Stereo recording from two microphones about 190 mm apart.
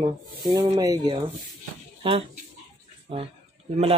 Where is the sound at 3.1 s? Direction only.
25° right (ahead or behind).